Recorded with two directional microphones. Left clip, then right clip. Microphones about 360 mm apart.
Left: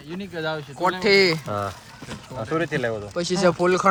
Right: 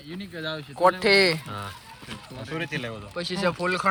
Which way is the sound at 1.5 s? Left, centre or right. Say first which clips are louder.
Left 9 dB; centre.